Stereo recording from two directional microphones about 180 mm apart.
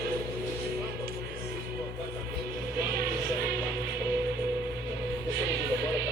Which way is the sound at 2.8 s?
60° right (ahead or behind).